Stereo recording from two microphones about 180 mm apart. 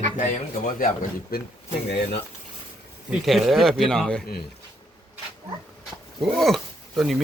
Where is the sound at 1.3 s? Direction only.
55° left (ahead or behind).